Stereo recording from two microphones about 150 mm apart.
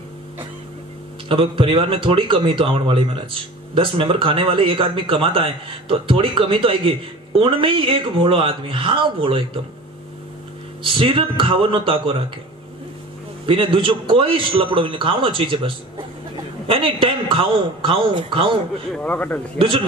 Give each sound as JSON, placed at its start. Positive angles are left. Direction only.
{"t": 1.3, "sound": "speech", "side_deg": -35}
{"t": 10.8, "sound": "speech", "side_deg": -35}
{"t": 13.5, "sound": "speech", "side_deg": -35}
{"t": 18.9, "sound": "speech", "side_deg": 10}